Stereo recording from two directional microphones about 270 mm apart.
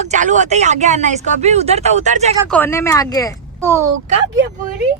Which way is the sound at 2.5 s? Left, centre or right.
Centre.